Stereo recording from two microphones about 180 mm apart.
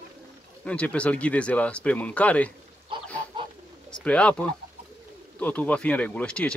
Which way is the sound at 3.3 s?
25° right (ahead or behind).